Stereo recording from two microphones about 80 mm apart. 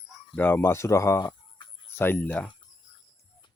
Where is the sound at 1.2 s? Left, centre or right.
Left.